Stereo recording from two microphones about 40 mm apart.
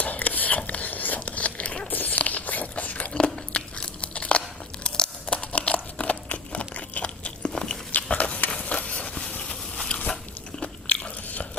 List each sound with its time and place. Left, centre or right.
0.0 s a sound: left
1.2 s zipper: left
1.9 s biting: left
3.1 s biting: left
8.1 s a sound: left
10.6 s biting: left